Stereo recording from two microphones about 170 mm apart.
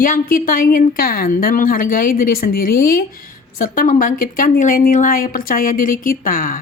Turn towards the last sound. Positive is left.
turn(degrees=55)  # may be behind; listen again after turning